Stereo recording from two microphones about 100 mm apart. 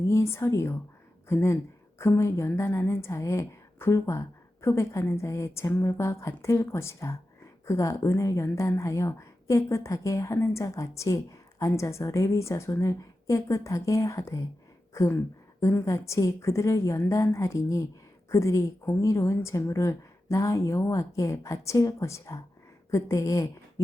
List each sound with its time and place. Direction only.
0.1 s a woman's voice: 25° left (ahead or behind)